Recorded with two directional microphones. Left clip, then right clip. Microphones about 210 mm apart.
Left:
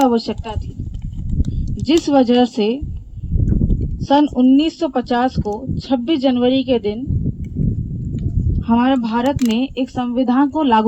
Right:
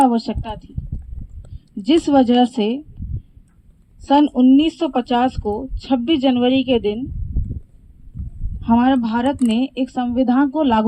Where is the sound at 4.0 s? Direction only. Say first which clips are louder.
Even; 50° right (ahead or behind).